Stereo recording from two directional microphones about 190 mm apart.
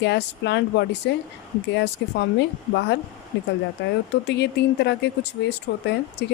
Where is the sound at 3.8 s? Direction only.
65° left (ahead or behind).